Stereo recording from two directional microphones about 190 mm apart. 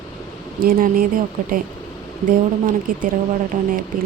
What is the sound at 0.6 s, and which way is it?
Speech, 45° right (ahead or behind).